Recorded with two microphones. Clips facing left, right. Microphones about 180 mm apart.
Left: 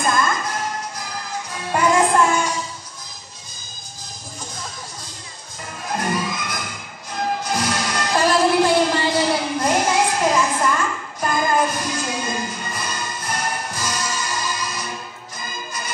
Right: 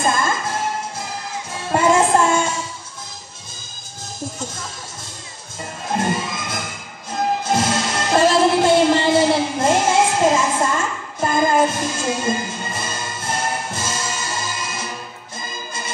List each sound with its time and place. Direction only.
0.0 s music: 25° right (ahead or behind)
5.9 s music: 25° right (ahead or behind)